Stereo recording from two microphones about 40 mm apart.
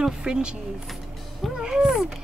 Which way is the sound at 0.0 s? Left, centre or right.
Centre.